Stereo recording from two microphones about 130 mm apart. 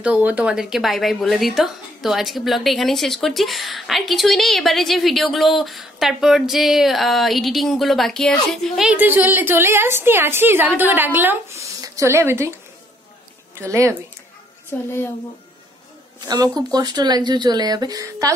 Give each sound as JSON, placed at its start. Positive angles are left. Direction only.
{"t": 0.0, "sound": "speech", "side_deg": -10}
{"t": 8.8, "sound": "a woman's voice", "side_deg": -15}
{"t": 13.6, "sound": "a woman's voice", "side_deg": -20}
{"t": 14.7, "sound": "a woman's voice", "side_deg": 15}
{"t": 16.3, "sound": "speech", "side_deg": -30}